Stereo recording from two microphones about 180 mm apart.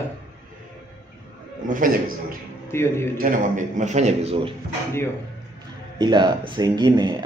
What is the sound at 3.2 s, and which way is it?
Speech, 45° right (ahead or behind).